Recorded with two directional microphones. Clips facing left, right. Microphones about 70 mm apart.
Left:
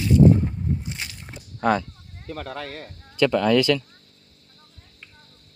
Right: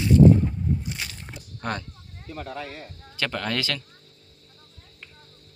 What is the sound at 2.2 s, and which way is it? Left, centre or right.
Speech, left.